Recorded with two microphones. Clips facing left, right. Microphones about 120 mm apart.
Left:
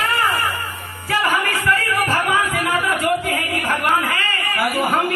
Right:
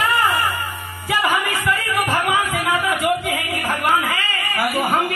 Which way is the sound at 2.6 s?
5° right (ahead or behind).